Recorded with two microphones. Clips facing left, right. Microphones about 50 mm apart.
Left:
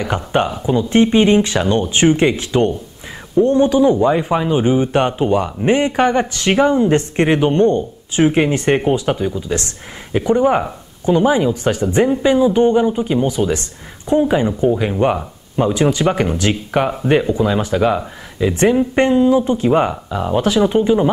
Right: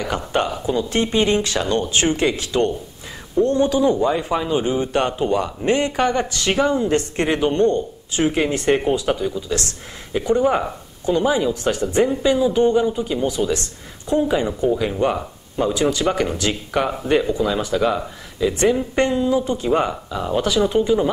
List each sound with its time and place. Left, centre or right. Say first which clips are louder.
0.0 s speech: left 4 dB; centre